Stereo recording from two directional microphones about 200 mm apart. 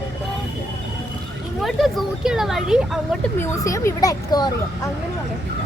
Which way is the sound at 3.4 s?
15° left (ahead or behind).